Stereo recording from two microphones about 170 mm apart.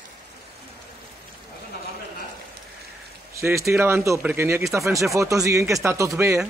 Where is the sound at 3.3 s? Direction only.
15° right (ahead or behind).